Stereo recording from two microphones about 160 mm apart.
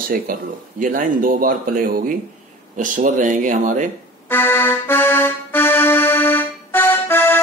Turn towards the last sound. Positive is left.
turn(degrees=15)  # may be behind; listen again after turning